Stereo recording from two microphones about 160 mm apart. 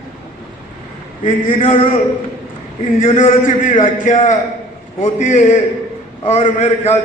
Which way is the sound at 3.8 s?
50° left (ahead or behind).